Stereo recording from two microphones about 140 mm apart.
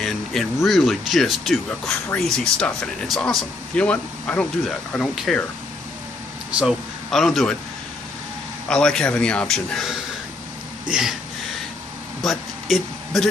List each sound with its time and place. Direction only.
0.0 s a sound: centre (ahead or behind)
0.7 s speech: centre (ahead or behind)
6.5 s speech: centre (ahead or behind)
8.6 s speech: 5° left (ahead or behind)
12.2 s speech: centre (ahead or behind)